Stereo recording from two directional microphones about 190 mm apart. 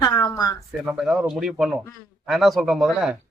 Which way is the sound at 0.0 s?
20° left (ahead or behind).